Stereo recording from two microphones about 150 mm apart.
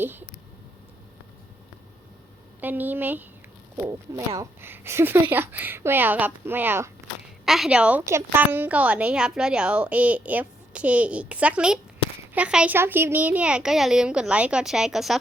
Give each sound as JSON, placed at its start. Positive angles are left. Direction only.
{"t": 0.0, "sound": "a sound", "side_deg": -15}
{"t": 2.6, "sound": "a woman's voice", "side_deg": -10}
{"t": 7.4, "sound": "a woman's voice", "side_deg": 0}